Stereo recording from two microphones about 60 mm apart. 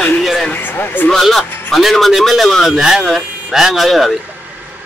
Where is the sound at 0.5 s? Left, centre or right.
Left.